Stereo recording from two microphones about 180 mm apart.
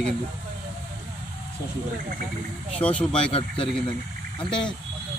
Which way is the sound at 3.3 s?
30° left (ahead or behind).